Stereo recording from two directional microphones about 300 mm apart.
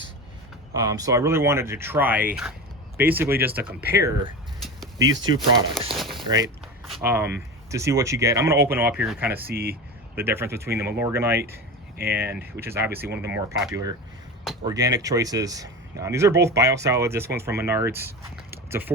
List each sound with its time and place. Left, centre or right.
0.7 s speech: centre
5.9 s a sound: centre
6.2 s speech: centre
9.5 s speech: right
10.2 s speech: centre
18.5 s a sound: centre